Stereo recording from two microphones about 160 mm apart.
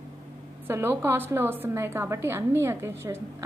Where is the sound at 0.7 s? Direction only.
15° right (ahead or behind).